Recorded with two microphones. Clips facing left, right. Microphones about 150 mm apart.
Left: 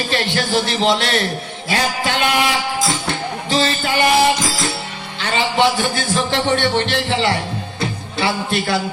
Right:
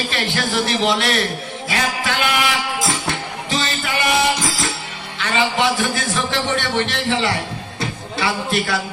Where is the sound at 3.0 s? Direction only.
30° left (ahead or behind).